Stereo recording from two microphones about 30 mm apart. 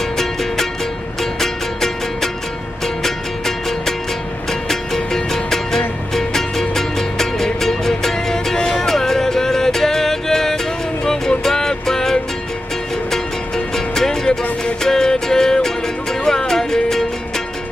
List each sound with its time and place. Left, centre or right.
0.2 s music: centre
3.0 s music: centre
13.7 s music: centre